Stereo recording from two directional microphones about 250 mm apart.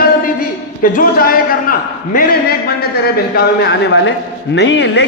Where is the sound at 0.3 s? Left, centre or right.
Left.